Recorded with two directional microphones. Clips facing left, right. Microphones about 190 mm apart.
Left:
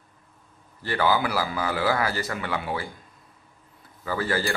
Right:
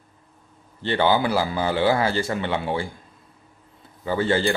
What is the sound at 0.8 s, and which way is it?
Speech, 25° right (ahead or behind).